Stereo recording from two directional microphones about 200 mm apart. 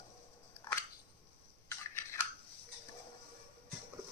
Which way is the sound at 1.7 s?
15° left (ahead or behind).